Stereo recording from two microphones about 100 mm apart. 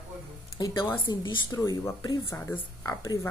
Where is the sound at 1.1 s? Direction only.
50° left (ahead or behind).